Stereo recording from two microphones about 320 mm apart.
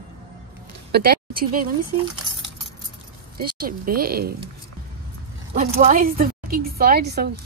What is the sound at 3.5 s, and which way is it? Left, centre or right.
Speech, right.